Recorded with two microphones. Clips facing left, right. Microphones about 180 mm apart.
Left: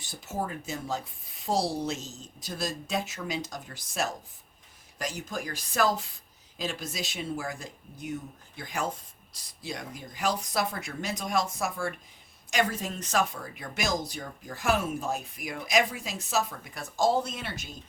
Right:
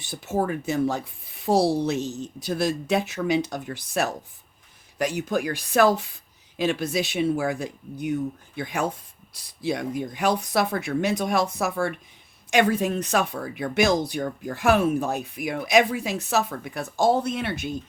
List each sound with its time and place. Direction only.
0.0 s speech: 65° right (ahead or behind)